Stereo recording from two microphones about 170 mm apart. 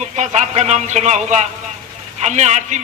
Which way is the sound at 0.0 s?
40° right (ahead or behind).